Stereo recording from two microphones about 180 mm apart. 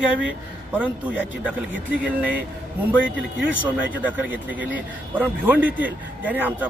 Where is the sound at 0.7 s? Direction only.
10° right (ahead or behind).